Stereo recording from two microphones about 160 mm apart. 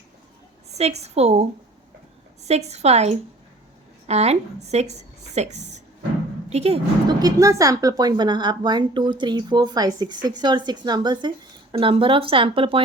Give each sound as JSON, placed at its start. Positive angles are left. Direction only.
{"t": 0.7, "sound": "a woman's voice", "side_deg": -40}
{"t": 2.5, "sound": "a woman's voice", "side_deg": -45}
{"t": 7.1, "sound": "a woman's voice", "side_deg": -25}